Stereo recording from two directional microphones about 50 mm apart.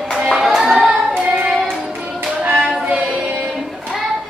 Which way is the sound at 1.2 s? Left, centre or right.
Centre.